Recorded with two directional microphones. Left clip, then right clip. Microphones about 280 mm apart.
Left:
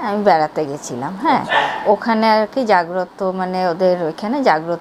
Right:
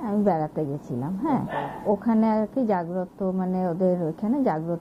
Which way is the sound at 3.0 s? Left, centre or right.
Centre.